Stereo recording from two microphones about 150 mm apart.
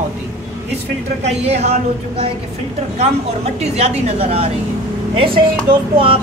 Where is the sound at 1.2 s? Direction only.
45° right (ahead or behind).